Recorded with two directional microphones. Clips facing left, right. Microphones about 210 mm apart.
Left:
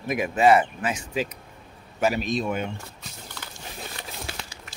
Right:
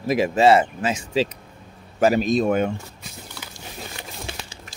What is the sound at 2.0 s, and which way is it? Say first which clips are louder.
Speech: right 6 dB; 40° right (ahead or behind).